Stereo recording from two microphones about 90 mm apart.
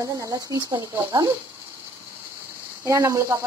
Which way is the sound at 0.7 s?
60° right (ahead or behind).